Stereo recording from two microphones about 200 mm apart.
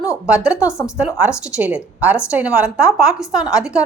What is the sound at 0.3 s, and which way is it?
A woman's voice, 5° right (ahead or behind).